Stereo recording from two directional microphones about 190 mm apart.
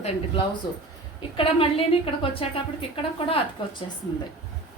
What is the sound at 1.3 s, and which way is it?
A woman's voice, 30° left (ahead or behind).